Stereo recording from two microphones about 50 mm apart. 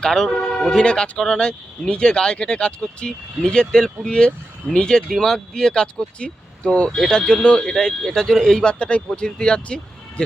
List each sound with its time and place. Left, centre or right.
0.0 s speech: centre
8.6 s speech: left